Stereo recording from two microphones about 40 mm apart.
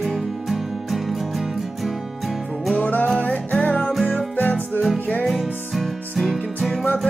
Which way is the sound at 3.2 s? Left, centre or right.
Left.